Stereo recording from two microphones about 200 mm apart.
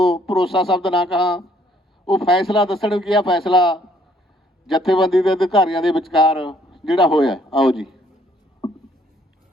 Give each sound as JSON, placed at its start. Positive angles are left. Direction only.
{"t": 0.1, "sound": "speech", "side_deg": 0}